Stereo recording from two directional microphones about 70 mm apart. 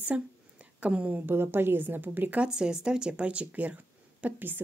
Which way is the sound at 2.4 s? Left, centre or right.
Centre.